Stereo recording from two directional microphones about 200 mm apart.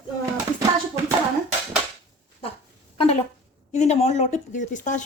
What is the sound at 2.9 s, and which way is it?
Speech, 30° left (ahead or behind).